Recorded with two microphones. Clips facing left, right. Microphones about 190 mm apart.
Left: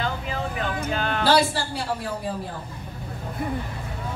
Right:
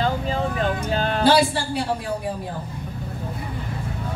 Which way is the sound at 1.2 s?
20° right (ahead or behind).